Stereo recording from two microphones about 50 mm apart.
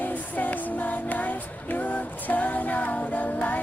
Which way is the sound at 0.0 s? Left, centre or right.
Left.